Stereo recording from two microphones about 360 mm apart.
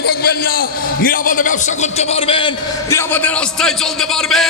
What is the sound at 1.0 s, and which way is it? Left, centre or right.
A man's voice, left.